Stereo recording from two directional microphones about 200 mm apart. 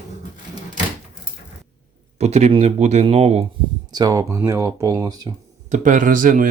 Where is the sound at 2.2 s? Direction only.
35° right (ahead or behind).